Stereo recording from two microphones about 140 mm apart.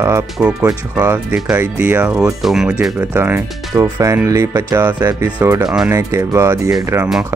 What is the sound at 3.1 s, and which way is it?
Speech, 15° right (ahead or behind).